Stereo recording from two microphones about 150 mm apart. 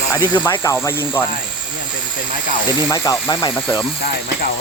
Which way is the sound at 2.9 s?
25° left (ahead or behind).